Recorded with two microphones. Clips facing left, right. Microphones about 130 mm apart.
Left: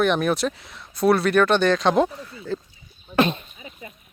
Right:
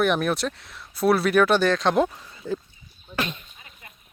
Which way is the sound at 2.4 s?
20° right (ahead or behind).